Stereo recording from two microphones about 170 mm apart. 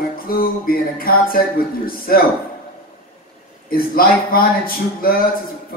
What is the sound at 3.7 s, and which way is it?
Speech, 60° left (ahead or behind).